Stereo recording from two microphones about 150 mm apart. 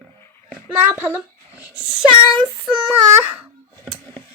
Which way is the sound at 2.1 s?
35° right (ahead or behind).